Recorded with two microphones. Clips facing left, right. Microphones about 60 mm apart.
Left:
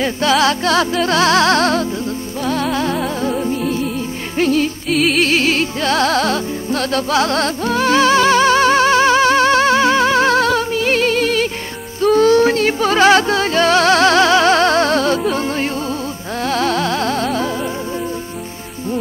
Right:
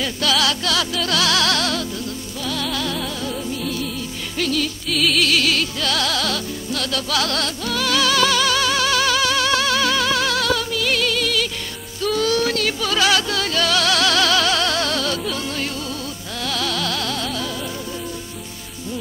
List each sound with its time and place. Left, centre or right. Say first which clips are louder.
0.0 s music: left 6 dB; left
4.9 s music: left 5 dB; left
5.2 s music: left 4 dB; left